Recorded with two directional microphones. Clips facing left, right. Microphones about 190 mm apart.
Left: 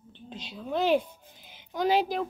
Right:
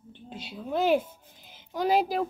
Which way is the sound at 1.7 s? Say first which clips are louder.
Right 1 dB; 5° right (ahead or behind).